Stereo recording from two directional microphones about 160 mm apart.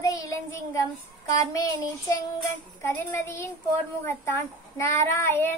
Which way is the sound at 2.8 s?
15° left (ahead or behind).